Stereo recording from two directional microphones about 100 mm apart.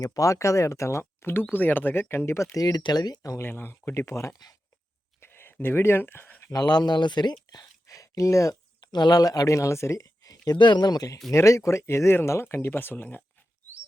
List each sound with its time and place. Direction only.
0.0 s speech: 35° left (ahead or behind)
3.4 s speech: 20° left (ahead or behind)
5.2 s a sound: 25° left (ahead or behind)
6.5 s speech: 40° left (ahead or behind); by 13.2 s 20° left (ahead or behind)